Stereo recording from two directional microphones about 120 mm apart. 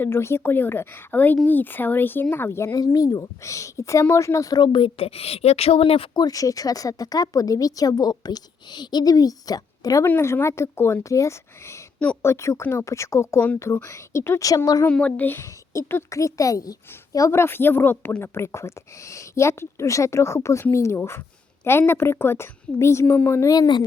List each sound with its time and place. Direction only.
0.0 s a woman's voice: 20° left (ahead or behind); by 6.1 s 50° left (ahead or behind)
6.1 s speech: 30° left (ahead or behind)
10.1 s a woman's voice: 20° left (ahead or behind)
14.8 s a woman's voice: 10° left (ahead or behind)
23.5 s speech: 35° left (ahead or behind)